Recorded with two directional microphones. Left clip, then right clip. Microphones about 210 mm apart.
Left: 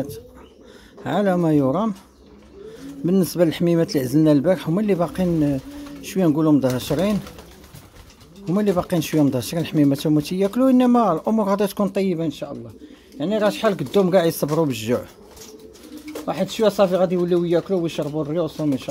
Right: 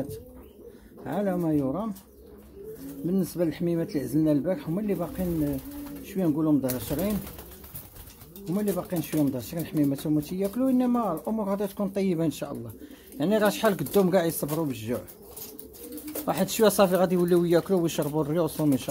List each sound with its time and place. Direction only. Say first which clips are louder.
1.0 s speech: left 8 dB; 20° left (ahead or behind)
3.1 s speech: left 9 dB; 20° left (ahead or behind)
8.5 s speech: left 9 dB; 20° left (ahead or behind)
12.1 s speech: left 3 dB; 5° right (ahead or behind); by 15.0 s 15° left (ahead or behind)
16.3 s speech: left 3 dB; 5° right (ahead or behind)